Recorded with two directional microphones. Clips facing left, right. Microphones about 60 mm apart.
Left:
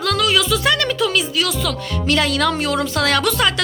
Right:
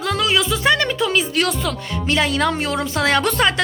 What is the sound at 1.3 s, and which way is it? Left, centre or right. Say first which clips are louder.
Speech: right 1 dB; right.